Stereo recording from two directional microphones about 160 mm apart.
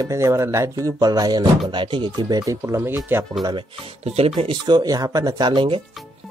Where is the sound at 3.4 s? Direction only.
30° right (ahead or behind).